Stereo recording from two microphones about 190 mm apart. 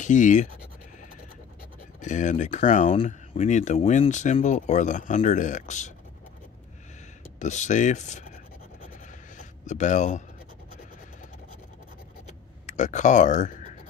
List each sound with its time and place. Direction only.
0.0 s speech: 40° left (ahead or behind)
2.0 s speech: 40° left (ahead or behind)
7.3 s speech: 40° left (ahead or behind)
9.7 s speech: 40° left (ahead or behind)
12.3 s a sound: 40° left (ahead or behind)